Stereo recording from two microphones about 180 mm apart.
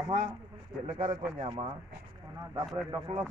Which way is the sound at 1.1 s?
25° right (ahead or behind).